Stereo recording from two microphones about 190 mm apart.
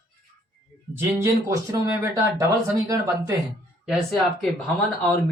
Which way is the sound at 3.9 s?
Centre (ahead or behind).